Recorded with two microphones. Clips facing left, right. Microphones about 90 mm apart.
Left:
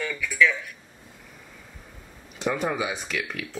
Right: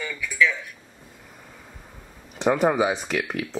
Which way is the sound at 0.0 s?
10° right (ahead or behind).